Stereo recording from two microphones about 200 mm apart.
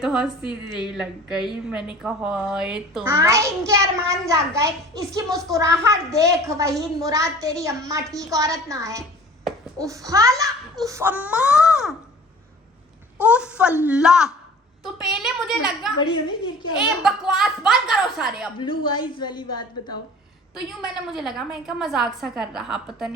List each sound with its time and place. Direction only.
0.0 s a woman's voice: centre (ahead or behind)
13.2 s a woman's voice: 5° right (ahead or behind)
16.0 s a woman's voice: 20° left (ahead or behind)
16.7 s a woman's voice: 5° right (ahead or behind)
18.5 s a woman's voice: 25° left (ahead or behind)
20.8 s a woman's voice: centre (ahead or behind)